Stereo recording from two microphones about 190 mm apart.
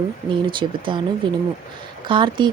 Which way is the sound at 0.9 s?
25° right (ahead or behind).